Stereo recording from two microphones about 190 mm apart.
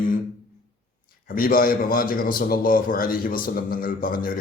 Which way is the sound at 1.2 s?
50° left (ahead or behind).